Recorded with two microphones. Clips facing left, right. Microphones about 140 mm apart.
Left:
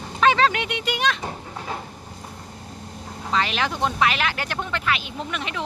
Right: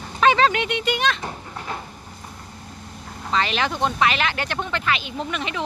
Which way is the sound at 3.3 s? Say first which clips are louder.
Right 1 dB; 5° left (ahead or behind).